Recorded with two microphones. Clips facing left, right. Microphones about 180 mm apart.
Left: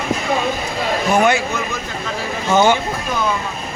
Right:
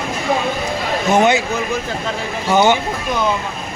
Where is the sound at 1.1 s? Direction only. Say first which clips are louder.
Right 2 dB; 20° right (ahead or behind).